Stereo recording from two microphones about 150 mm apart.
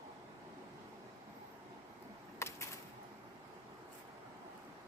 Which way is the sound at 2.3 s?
20° left (ahead or behind).